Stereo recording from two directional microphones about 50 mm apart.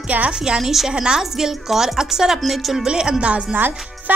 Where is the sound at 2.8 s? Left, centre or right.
Centre.